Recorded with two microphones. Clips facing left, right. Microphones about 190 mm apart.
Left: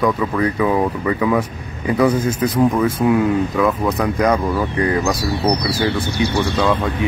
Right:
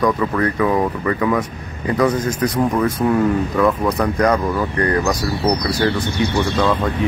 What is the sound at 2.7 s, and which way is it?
Speech, 5° left (ahead or behind).